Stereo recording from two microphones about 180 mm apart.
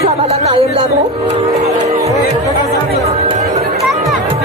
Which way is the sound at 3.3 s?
40° right (ahead or behind).